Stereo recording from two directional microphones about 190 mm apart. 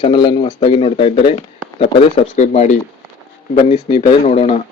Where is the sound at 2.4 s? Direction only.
40° left (ahead or behind).